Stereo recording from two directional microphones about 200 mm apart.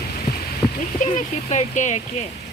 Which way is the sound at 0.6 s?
15° left (ahead or behind).